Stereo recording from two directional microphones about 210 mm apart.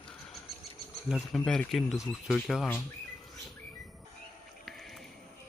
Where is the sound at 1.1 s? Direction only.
Centre (ahead or behind).